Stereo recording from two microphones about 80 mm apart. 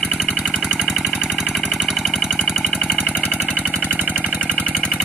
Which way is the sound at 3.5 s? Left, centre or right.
Centre.